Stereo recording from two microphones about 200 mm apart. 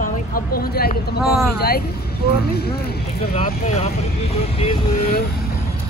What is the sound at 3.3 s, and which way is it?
Speech, 35° left (ahead or behind).